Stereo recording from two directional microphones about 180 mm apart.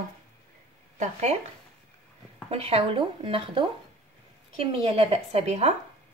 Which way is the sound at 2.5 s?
35° right (ahead or behind).